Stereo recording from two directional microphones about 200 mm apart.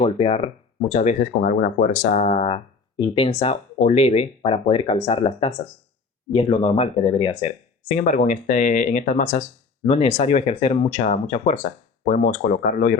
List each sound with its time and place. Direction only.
0.0 s speech: 30° left (ahead or behind)
7.9 s speech: 40° left (ahead or behind)